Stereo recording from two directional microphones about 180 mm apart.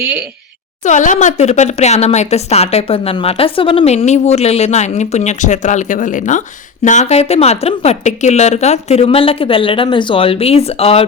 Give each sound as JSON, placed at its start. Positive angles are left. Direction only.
{"t": 0.0, "sound": "speech", "side_deg": -10}
{"t": 0.9, "sound": "speech", "side_deg": 45}